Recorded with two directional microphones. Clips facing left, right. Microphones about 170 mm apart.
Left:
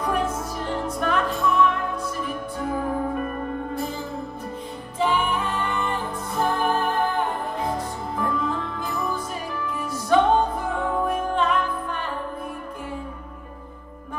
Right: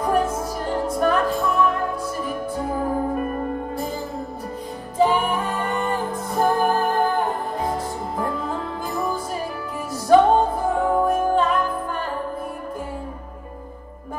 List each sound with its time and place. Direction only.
0.7 s music: 40° right (ahead or behind)
4.9 s music: 40° right (ahead or behind)
8.2 s music: 35° right (ahead or behind)